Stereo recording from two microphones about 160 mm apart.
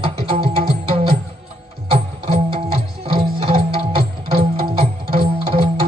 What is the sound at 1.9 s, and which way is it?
Music, 35° right (ahead or behind).